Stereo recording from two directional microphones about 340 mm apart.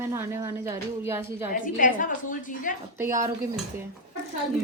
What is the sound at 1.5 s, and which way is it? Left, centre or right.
A woman's voice, left.